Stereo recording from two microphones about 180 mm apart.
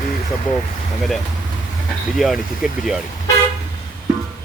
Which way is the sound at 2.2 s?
Centre (ahead or behind).